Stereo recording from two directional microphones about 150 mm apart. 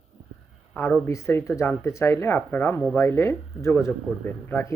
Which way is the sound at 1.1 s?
20° left (ahead or behind).